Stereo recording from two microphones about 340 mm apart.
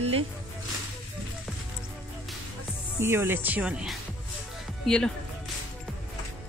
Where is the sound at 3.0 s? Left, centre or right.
Centre.